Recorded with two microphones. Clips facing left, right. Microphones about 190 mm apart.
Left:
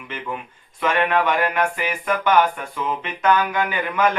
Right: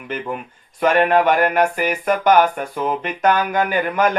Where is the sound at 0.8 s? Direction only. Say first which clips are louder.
Right 5 dB; 40° right (ahead or behind).